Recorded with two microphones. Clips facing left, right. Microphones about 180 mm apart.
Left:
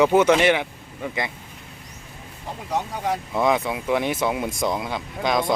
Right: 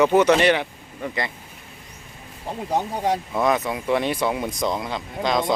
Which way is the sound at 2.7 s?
30° right (ahead or behind).